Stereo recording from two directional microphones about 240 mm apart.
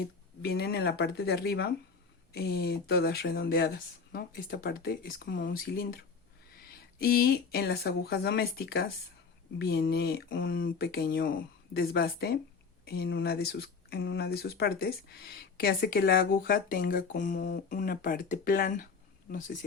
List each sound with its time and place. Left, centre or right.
0.4 s speech: left
7.0 s speech: left